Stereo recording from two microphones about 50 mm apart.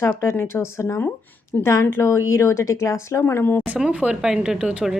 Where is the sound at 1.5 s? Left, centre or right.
Left.